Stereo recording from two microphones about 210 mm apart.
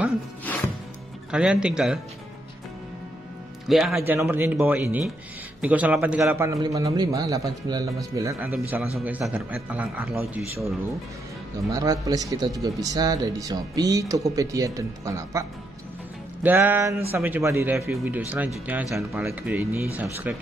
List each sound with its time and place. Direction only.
1.3 s speech: 5° right (ahead or behind)
3.6 s a man's voice: centre (ahead or behind)
11.7 s a man's voice: 15° right (ahead or behind)
16.4 s a man's voice: 10° right (ahead or behind)